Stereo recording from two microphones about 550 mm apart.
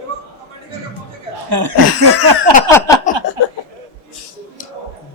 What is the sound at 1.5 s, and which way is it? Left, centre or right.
Speech, right.